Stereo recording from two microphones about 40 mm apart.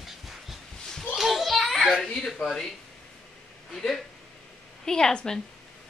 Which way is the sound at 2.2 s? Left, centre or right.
Centre.